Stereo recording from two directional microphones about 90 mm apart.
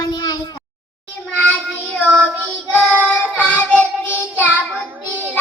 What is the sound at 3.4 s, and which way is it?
Child singing, 15° left (ahead or behind).